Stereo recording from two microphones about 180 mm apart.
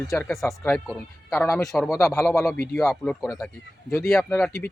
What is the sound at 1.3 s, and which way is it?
Speech, 10° left (ahead or behind).